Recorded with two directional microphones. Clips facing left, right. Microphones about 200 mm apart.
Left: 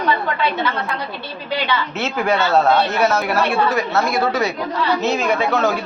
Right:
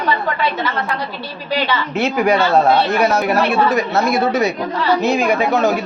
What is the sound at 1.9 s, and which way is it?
Speech, 15° right (ahead or behind).